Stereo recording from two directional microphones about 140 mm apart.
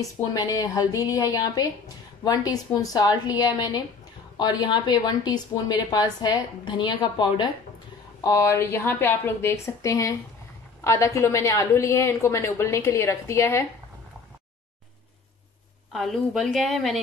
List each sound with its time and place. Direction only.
0.0 s a woman's voice: 25° left (ahead or behind)
8.2 s a woman's voice: 20° left (ahead or behind)
15.9 s a woman's voice: centre (ahead or behind)